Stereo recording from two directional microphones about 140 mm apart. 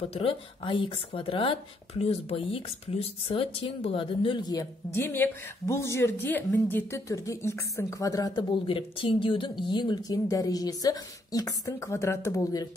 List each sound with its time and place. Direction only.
0.1 s speech: 40° left (ahead or behind)
4.9 s speech: 15° left (ahead or behind)
8.6 s speech: 40° left (ahead or behind); by 12.6 s 20° left (ahead or behind)